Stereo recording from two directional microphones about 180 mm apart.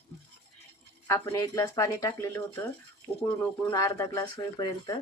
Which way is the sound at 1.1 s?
15° left (ahead or behind).